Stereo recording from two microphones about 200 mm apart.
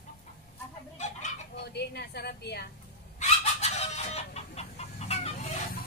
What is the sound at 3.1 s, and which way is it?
Chicken, 35° left (ahead or behind).